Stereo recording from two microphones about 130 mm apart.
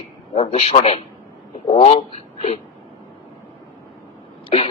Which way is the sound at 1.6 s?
55° left (ahead or behind).